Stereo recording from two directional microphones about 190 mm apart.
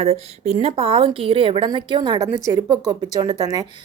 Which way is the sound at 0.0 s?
35° right (ahead or behind).